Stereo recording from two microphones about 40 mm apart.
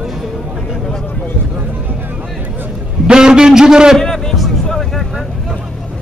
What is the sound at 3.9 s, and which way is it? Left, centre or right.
Music, centre.